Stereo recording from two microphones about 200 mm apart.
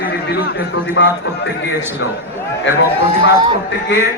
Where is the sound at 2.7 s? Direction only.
65° left (ahead or behind).